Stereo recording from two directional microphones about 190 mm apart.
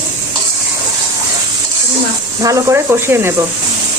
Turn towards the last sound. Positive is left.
turn(degrees=-15)  # may be behind; listen again after turning